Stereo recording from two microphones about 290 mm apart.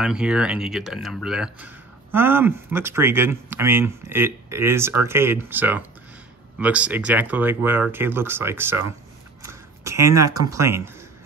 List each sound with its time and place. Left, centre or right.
0.0 s speech: centre